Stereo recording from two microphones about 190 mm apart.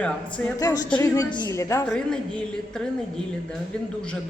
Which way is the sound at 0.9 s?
20° left (ahead or behind).